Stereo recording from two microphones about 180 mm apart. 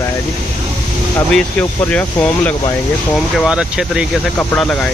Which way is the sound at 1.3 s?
5° left (ahead or behind).